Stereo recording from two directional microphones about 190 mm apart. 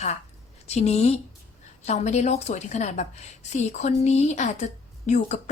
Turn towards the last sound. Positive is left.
turn(degrees=40)  # may be behind; listen again after turning